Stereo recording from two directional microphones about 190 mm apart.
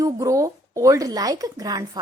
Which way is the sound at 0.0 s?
15° right (ahead or behind).